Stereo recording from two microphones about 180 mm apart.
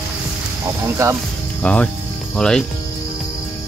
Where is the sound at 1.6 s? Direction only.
5° left (ahead or behind).